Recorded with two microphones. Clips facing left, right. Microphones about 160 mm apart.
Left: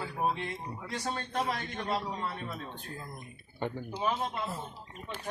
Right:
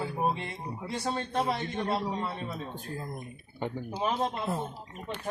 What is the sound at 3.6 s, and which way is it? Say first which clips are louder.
Speech: right 1 dB; 15° right (ahead or behind).